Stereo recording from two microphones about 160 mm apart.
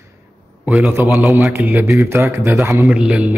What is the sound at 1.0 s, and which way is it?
Speech, 15° right (ahead or behind).